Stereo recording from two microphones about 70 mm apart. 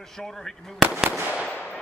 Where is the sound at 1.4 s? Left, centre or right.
Centre.